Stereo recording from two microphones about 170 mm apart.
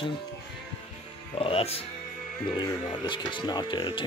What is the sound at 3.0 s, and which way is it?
Speech, 25° left (ahead or behind).